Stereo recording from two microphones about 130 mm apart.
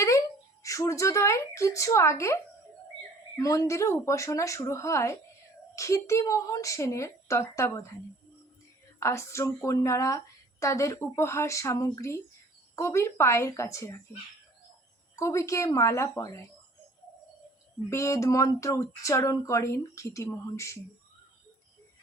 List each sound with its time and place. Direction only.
0.6 s a woman's voice: 25° left (ahead or behind)
9.0 s a woman's voice: 20° left (ahead or behind)
15.1 s a woman's voice: 25° left (ahead or behind)
17.8 s a woman's voice: 20° left (ahead or behind)